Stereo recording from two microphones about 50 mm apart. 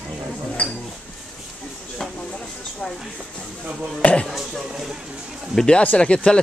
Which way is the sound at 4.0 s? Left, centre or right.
Left.